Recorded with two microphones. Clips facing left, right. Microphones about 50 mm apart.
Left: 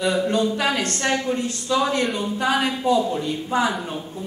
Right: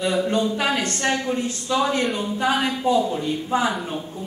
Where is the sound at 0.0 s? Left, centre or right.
Centre.